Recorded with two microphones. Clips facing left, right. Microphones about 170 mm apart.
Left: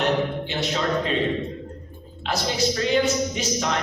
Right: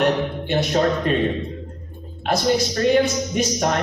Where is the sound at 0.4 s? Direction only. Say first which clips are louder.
Right 6 dB; 50° right (ahead or behind).